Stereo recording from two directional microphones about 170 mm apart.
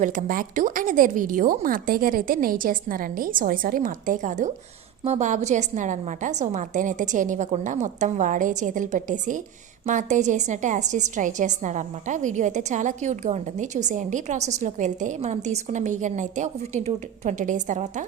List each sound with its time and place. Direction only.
0.0 s a woman's voice: 50° right (ahead or behind)